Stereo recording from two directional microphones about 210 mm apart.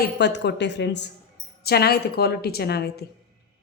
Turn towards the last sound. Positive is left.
turn(degrees=50)  # may be behind; listen again after turning